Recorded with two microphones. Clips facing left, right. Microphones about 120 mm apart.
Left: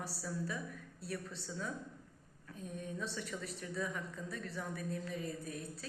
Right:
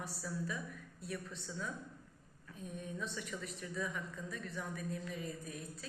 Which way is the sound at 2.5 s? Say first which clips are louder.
Left 1 dB; 35° left (ahead or behind).